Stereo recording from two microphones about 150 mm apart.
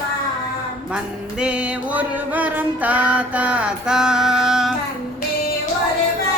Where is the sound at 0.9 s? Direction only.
5° right (ahead or behind).